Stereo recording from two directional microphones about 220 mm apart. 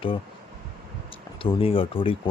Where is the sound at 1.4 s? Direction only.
25° left (ahead or behind).